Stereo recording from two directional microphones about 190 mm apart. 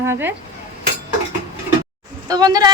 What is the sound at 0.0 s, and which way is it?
Cutlery, 10° right (ahead or behind).